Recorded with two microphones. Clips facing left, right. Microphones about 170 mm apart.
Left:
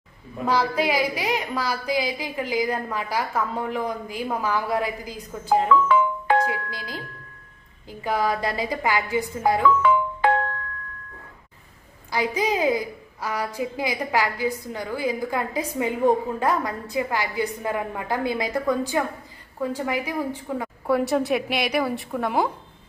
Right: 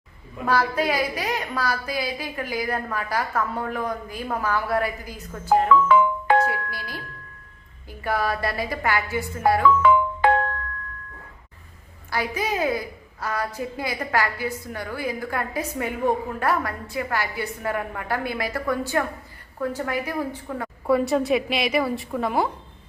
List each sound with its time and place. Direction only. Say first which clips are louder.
0.4 s a woman's voice: even; 15° left (ahead or behind)
5.9 s music: right 2 dB; 55° right (ahead or behind)
6.4 s a woman's voice: right 1 dB; 15° left (ahead or behind)
9.7 s music: right 2 dB; 55° right (ahead or behind)
12.1 s a woman's voice: left 2 dB; 15° left (ahead or behind)
20.8 s a woman's voice: right 1 dB; centre (ahead or behind)